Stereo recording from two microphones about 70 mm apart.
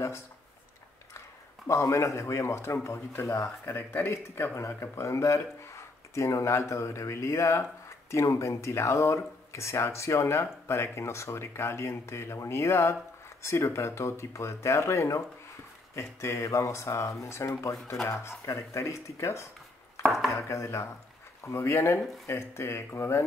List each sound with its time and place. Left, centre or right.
1.7 s speech: left
20.0 s chopping: centre
20.2 s speech: left